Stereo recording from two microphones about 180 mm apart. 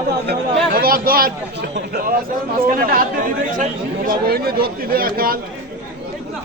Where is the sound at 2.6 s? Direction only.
55° right (ahead or behind).